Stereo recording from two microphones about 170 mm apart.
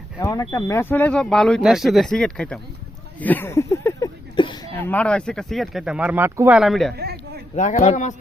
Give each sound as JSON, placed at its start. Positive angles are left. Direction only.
{"t": 0.2, "sound": "speech", "side_deg": 20}
{"t": 3.2, "sound": "a sound", "side_deg": 10}
{"t": 4.4, "sound": "speech", "side_deg": 30}
{"t": 4.8, "sound": "speech", "side_deg": 10}
{"t": 6.6, "sound": "speech", "side_deg": 0}
{"t": 6.9, "sound": "a sound", "side_deg": -70}
{"t": 7.5, "sound": "speech", "side_deg": 45}